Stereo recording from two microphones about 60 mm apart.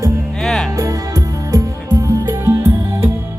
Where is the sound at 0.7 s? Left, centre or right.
Right.